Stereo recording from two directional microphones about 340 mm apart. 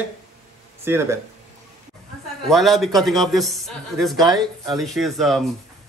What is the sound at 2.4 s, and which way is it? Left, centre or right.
Speech, centre.